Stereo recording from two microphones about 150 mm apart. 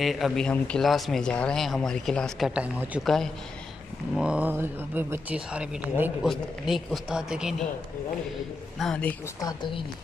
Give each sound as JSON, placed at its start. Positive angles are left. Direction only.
{"t": 0.0, "sound": "a man's voice", "side_deg": 0}
{"t": 2.5, "sound": "speech", "side_deg": -10}
{"t": 3.0, "sound": "a man's voice", "side_deg": 0}
{"t": 4.2, "sound": "speech", "side_deg": -10}
{"t": 6.2, "sound": "a man's voice", "side_deg": 0}
{"t": 8.7, "sound": "a man's voice", "side_deg": 5}
{"t": 9.4, "sound": "a woman's voice", "side_deg": 30}